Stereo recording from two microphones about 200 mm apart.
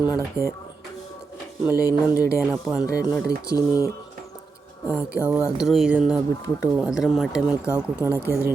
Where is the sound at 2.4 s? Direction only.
Centre (ahead or behind).